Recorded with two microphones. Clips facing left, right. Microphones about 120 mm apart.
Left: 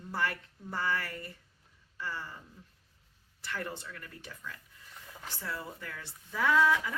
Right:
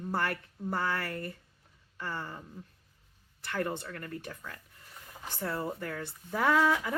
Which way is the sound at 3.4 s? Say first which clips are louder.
Right 5 dB; 55° right (ahead or behind).